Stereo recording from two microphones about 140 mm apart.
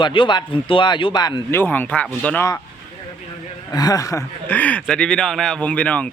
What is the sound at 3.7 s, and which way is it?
Speech, 25° left (ahead or behind).